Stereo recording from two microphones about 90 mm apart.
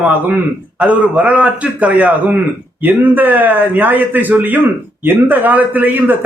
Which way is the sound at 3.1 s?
20° right (ahead or behind).